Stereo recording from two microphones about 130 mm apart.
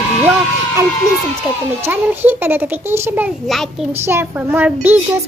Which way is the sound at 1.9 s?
15° right (ahead or behind).